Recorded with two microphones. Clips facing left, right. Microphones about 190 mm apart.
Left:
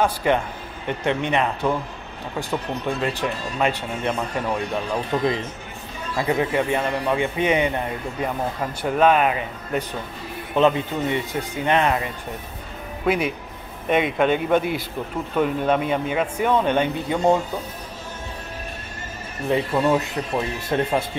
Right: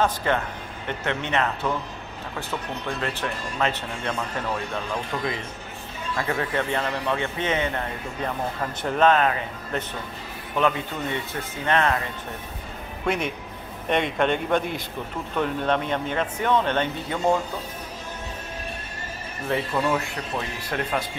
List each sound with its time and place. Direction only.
0.0 s a man's voice: 15° left (ahead or behind)
5.1 s a man's voice: 25° left (ahead or behind)
13.0 s a man's voice: 5° left (ahead or behind)
19.5 s speech: 20° left (ahead or behind)